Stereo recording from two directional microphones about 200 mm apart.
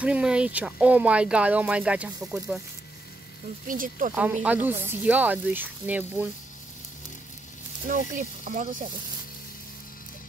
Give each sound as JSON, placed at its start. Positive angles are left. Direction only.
{"t": 0.0, "sound": "speech", "side_deg": -5}
{"t": 3.6, "sound": "speech", "side_deg": -40}
{"t": 4.1, "sound": "speech", "side_deg": -10}
{"t": 7.9, "sound": "speech", "side_deg": -40}